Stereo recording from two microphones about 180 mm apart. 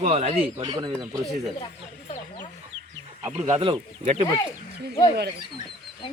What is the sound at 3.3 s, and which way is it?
Speech, 15° right (ahead or behind).